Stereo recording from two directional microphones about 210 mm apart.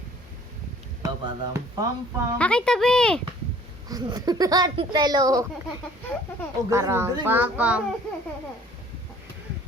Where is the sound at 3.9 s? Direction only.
20° right (ahead or behind).